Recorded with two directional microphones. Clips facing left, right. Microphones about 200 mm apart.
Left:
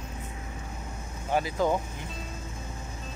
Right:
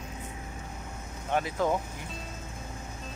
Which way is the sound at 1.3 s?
Centre (ahead or behind).